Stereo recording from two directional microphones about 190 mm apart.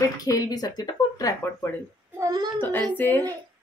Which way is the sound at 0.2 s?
20° left (ahead or behind).